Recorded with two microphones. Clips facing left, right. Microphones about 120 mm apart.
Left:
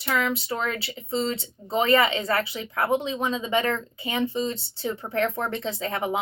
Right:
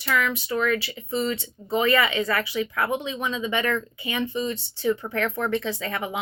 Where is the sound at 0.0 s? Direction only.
30° left (ahead or behind).